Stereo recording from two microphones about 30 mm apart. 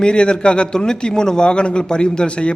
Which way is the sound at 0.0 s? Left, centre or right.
Left.